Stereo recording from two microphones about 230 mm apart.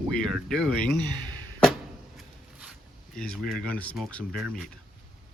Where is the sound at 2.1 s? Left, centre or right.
Centre.